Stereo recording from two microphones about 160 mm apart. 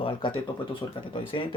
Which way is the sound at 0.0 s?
30° left (ahead or behind).